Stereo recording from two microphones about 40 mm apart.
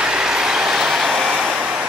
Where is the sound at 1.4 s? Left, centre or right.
Right.